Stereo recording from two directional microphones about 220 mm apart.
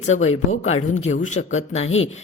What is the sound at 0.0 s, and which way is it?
A woman's voice, 30° left (ahead or behind).